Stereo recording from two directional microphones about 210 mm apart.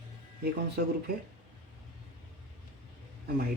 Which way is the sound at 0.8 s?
45° right (ahead or behind).